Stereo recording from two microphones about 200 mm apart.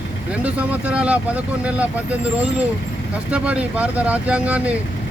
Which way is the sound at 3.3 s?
5° right (ahead or behind).